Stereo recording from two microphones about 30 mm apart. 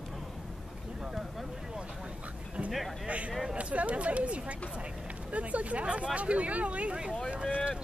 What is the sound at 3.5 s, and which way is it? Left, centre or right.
Speech, right.